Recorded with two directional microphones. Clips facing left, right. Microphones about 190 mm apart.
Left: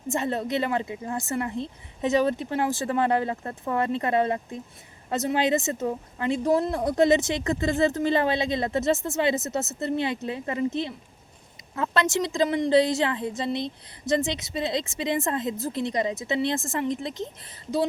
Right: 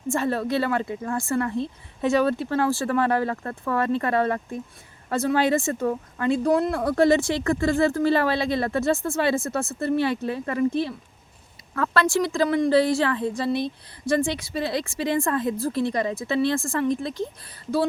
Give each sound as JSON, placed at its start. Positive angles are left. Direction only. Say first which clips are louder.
{"t": 0.1, "sound": "speech", "louder": "right 3 dB", "side_deg": 20}
{"t": 11.7, "sound": "speech", "louder": "right 3 dB", "side_deg": 20}